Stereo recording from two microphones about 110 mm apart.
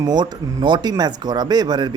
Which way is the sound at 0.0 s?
40° right (ahead or behind).